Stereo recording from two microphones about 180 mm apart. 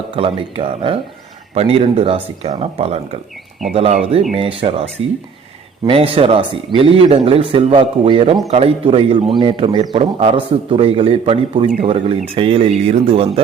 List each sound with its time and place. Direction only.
0.2 s a man's voice: 30° right (ahead or behind)
5.0 s speech: 90° right
5.8 s a man's voice: 30° right (ahead or behind)